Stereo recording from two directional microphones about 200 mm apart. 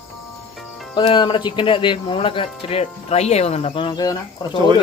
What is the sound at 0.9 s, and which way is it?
Speech, 25° left (ahead or behind).